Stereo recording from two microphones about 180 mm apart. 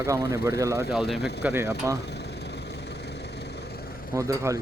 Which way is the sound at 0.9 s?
Centre (ahead or behind).